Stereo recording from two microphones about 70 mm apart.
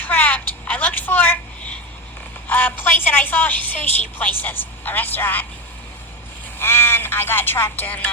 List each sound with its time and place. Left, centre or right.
0.0 s a sound: left
2.5 s a woman's voice: left
6.6 s speech: left